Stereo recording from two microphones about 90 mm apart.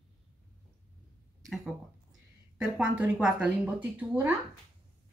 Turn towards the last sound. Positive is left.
turn(degrees=-20)  # may be behind; listen again after turning